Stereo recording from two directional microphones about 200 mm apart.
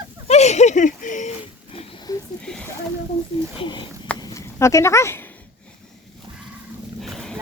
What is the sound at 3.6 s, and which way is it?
Speech, 25° left (ahead or behind).